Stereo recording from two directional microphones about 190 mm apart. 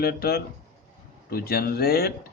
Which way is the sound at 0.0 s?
55° left (ahead or behind).